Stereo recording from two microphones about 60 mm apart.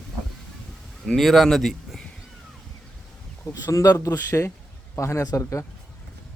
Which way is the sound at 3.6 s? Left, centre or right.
Left.